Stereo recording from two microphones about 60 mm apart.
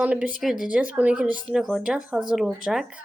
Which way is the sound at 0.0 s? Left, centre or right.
Right.